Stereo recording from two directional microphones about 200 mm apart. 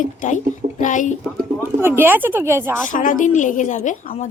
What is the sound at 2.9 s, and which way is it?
A woman's voice, 40° left (ahead or behind).